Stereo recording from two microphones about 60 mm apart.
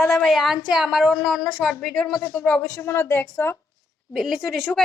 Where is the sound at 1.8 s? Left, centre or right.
Centre.